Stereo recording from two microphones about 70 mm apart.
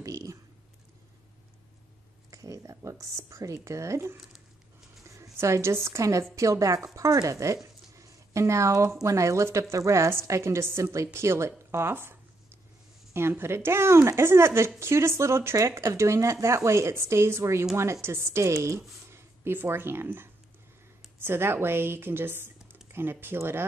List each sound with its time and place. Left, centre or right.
0.0 s a sound: right
2.3 s speech: right
19.0 s speech: right